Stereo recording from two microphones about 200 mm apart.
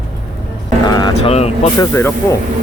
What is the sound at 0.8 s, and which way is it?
Vehicle, 20° left (ahead or behind).